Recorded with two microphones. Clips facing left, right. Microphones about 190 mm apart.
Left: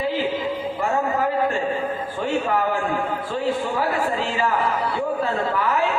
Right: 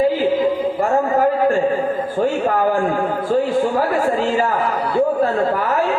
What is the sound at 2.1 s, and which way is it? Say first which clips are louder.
A man's voice: right 4 dB; 45° right (ahead or behind).